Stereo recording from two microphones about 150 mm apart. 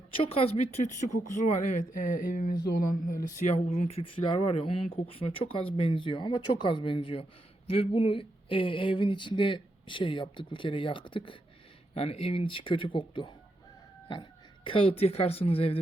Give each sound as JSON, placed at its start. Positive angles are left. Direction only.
{"t": 0.1, "sound": "speech", "side_deg": 40}
{"t": 3.4, "sound": "speech", "side_deg": 45}